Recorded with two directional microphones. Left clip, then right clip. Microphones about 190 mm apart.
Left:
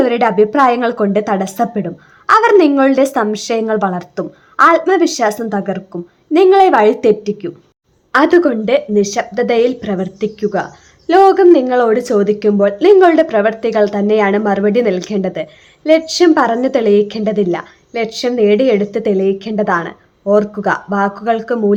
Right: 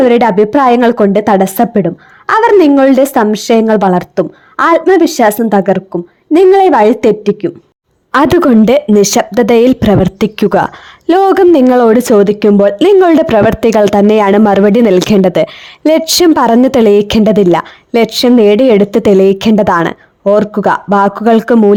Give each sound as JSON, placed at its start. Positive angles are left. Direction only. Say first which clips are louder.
{"t": 0.0, "sound": "a woman's voice", "louder": "right 5 dB", "side_deg": -35}
{"t": 8.1, "sound": "speech", "louder": "right 3 dB", "side_deg": -60}